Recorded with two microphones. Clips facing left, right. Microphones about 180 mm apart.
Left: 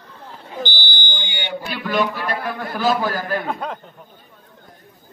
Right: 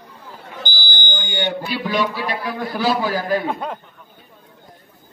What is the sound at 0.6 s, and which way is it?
Fire alarm, 45° right (ahead or behind).